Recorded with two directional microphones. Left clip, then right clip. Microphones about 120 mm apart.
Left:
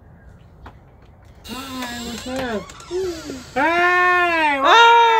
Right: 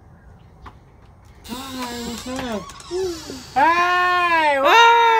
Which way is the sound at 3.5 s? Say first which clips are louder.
Even; 30° right (ahead or behind).